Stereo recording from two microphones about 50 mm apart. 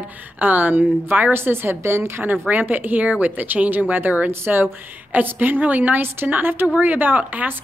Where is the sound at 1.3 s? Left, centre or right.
Right.